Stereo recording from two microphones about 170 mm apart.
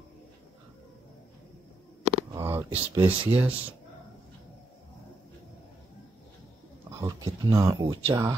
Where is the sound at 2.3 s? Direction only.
15° right (ahead or behind).